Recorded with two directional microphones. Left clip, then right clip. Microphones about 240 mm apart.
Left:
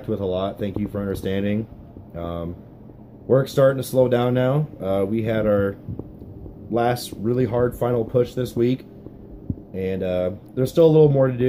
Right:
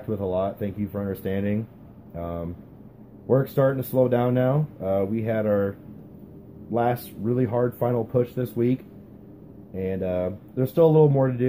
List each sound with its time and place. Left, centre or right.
0.1 s speech: centre